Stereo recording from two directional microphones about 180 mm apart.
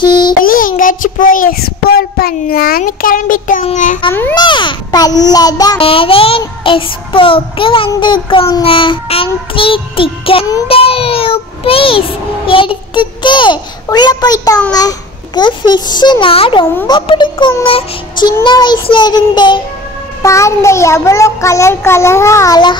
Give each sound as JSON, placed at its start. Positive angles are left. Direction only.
{"t": 0.0, "sound": "child singing", "side_deg": 25}
{"t": 0.4, "sound": "child singing", "side_deg": 50}
{"t": 3.6, "sound": "a child's voice", "side_deg": 45}
{"t": 4.1, "sound": "a child's voice", "side_deg": 10}
{"t": 4.4, "sound": "a child's voice", "side_deg": 25}